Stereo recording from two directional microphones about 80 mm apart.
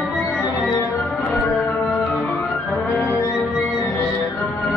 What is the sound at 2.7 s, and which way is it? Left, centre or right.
Music, left.